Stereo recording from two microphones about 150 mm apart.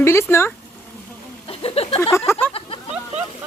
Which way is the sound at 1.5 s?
40° left (ahead or behind).